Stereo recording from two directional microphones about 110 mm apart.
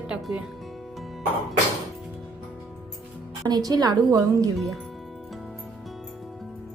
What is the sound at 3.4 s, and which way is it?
A woman's voice, 35° right (ahead or behind).